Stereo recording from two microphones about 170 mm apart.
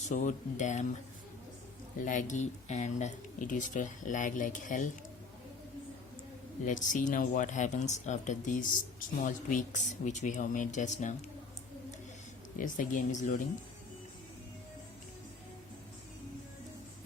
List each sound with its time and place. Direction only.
0.1 s speech: 45° left (ahead or behind)
2.0 s speech: 50° left (ahead or behind)
6.7 s speech: 50° left (ahead or behind)
12.5 s speech: 50° left (ahead or behind)